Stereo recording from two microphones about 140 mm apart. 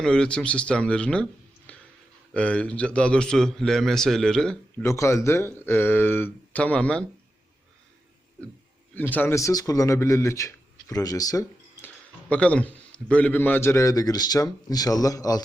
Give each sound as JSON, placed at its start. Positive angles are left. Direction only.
{"t": 0.0, "sound": "a man's voice", "side_deg": 5}
{"t": 4.8, "sound": "speech", "side_deg": 20}
{"t": 9.0, "sound": "speech", "side_deg": 15}
{"t": 12.3, "sound": "a man's voice", "side_deg": 10}